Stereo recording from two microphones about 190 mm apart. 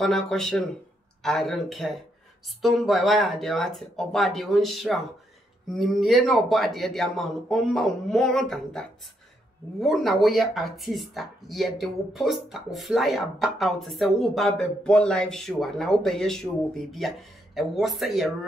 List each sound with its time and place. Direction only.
0.0 s speech: centre (ahead or behind)